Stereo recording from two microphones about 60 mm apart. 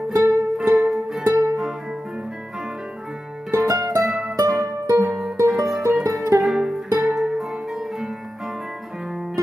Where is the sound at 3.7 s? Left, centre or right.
Right.